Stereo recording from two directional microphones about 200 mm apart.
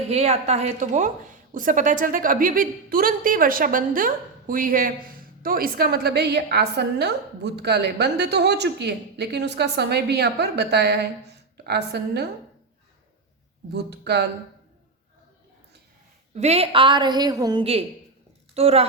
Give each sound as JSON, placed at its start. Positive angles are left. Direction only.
{"t": 0.1, "sound": "a woman's voice", "side_deg": -30}
{"t": 13.7, "sound": "a woman's voice", "side_deg": -55}
{"t": 16.3, "sound": "a woman's voice", "side_deg": -35}